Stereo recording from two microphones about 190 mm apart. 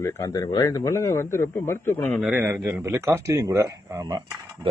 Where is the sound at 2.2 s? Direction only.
10° right (ahead or behind).